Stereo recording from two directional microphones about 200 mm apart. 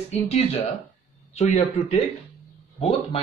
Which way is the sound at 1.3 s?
35° left (ahead or behind).